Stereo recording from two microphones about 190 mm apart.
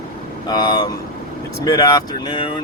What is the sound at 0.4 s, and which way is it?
Speech, 20° left (ahead or behind).